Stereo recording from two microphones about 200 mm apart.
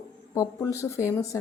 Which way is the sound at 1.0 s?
15° left (ahead or behind).